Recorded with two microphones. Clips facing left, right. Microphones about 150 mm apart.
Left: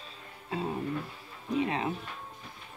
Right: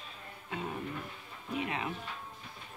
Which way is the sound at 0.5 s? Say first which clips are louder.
Left 6 dB; 30° left (ahead or behind).